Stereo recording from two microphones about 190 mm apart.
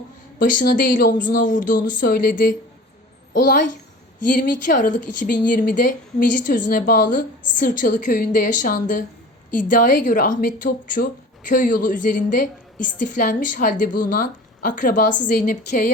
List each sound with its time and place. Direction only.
0.3 s a woman's voice: 45° left (ahead or behind)